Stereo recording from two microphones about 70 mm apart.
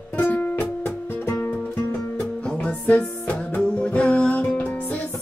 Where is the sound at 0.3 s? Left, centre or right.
Left.